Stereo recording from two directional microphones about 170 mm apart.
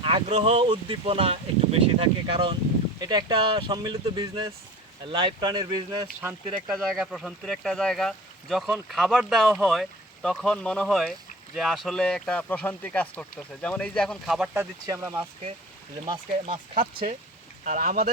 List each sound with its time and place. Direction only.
0.0 s speech: 35° right (ahead or behind)
6.7 s speech: centre (ahead or behind)
14.5 s speech: 15° right (ahead or behind)
16.0 s speech: 30° right (ahead or behind)
17.6 s speech: 50° right (ahead or behind)